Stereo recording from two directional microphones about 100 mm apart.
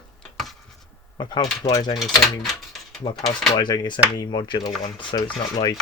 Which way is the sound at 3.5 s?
45° left (ahead or behind).